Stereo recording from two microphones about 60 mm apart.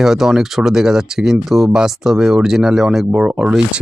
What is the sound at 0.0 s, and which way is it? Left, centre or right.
Speech, centre.